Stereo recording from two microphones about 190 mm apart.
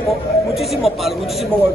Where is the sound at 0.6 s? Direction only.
Centre (ahead or behind).